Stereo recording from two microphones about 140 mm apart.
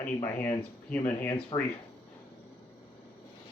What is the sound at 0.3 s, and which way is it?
Speech, 10° left (ahead or behind).